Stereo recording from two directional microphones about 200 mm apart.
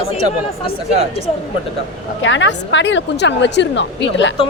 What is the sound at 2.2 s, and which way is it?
A woman's voice, 65° left (ahead or behind).